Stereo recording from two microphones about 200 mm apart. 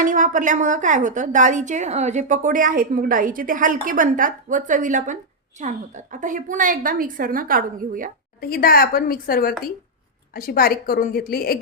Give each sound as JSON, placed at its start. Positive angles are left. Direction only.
{"t": 0.0, "sound": "a woman's voice", "side_deg": -40}
{"t": 8.4, "sound": "a woman's voice", "side_deg": 50}